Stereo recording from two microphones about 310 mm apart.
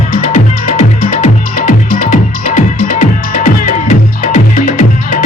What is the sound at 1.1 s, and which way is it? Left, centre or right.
Music, left.